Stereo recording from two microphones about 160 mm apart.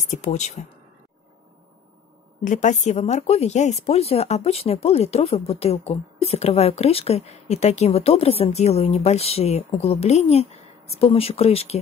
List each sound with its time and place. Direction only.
0.1 s speech: 50° left (ahead or behind)
2.4 s speech: 50° left (ahead or behind)